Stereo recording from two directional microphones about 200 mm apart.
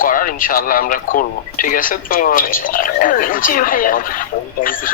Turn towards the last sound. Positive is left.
turn(degrees=45)  # may be behind; listen again after turning